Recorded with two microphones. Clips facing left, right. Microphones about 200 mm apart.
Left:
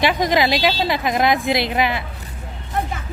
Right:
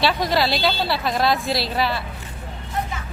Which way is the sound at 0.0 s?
15° left (ahead or behind).